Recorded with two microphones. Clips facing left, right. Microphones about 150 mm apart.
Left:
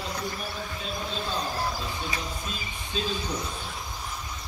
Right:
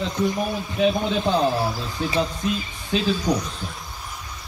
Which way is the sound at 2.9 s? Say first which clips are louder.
Right 10 dB; 80° right.